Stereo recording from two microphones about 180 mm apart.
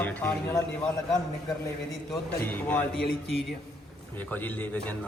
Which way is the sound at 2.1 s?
10° left (ahead or behind).